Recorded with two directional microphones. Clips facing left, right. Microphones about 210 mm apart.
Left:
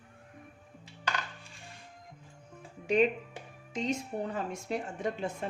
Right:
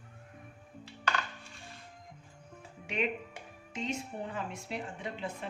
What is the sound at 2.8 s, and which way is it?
Speech, 35° left (ahead or behind).